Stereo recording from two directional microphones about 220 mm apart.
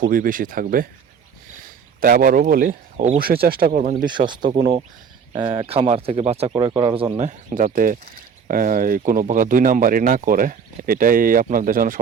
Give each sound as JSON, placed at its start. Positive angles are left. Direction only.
{"t": 0.0, "sound": "speech", "side_deg": -40}
{"t": 4.1, "sound": "speech", "side_deg": -20}
{"t": 5.5, "sound": "speech", "side_deg": -25}